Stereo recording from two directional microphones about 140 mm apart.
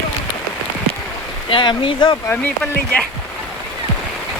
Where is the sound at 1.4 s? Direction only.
35° left (ahead or behind).